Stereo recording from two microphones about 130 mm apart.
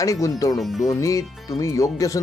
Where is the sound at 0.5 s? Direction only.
Centre (ahead or behind).